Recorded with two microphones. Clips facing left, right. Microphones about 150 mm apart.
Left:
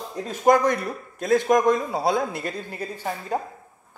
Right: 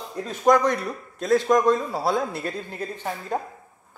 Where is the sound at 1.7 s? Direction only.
15° left (ahead or behind).